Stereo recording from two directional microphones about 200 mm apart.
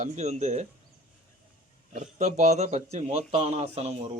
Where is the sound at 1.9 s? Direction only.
35° right (ahead or behind).